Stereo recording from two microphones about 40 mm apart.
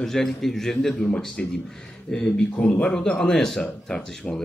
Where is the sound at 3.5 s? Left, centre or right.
Centre.